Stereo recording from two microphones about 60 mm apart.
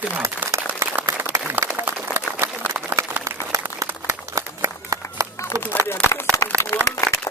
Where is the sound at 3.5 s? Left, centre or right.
Right.